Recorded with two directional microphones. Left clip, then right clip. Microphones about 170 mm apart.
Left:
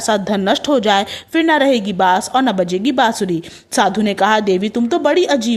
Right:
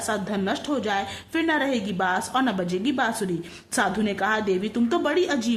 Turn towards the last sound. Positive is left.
turn(degrees=35)  # may be behind; listen again after turning